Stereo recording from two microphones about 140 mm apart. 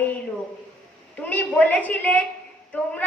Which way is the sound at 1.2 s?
10° left (ahead or behind).